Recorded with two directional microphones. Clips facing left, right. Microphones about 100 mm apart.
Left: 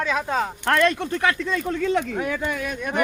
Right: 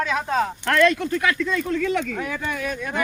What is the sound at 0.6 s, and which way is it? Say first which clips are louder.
Speech: right 1 dB; 30° left (ahead or behind).